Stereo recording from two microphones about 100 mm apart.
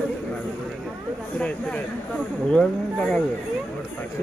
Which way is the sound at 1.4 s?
15° left (ahead or behind).